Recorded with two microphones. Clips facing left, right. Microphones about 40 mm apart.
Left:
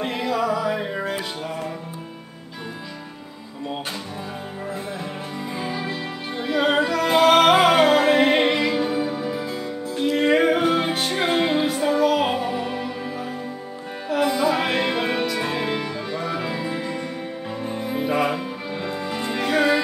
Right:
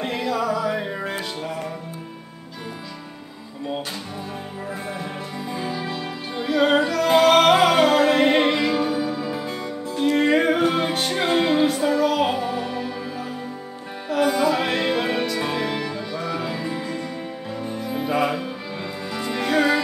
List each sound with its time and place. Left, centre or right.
0.0 s music: centre
5.5 s music: centre
8.8 s music: left
10.0 s music: centre
12.4 s music: left
14.4 s music: centre; by 18.0 s left
18.0 s music: centre
19.0 s music: centre
19.3 s music: centre